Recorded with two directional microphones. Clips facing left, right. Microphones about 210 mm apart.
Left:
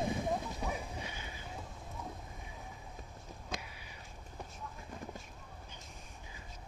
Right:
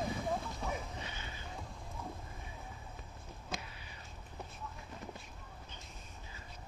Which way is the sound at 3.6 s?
10° left (ahead or behind).